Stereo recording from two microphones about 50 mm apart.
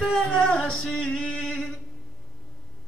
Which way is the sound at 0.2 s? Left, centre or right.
Centre.